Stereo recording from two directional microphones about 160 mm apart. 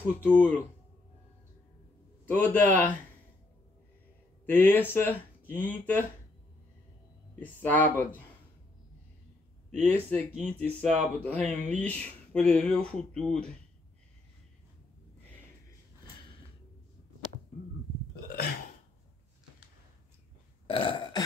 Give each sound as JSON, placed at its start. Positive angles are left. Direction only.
{"t": 0.2, "sound": "speech", "side_deg": 10}
{"t": 2.2, "sound": "speech", "side_deg": 10}
{"t": 4.5, "sound": "speech", "side_deg": 10}
{"t": 7.3, "sound": "speech", "side_deg": 10}
{"t": 9.7, "sound": "speech", "side_deg": 5}
{"t": 20.6, "sound": "burping", "side_deg": 35}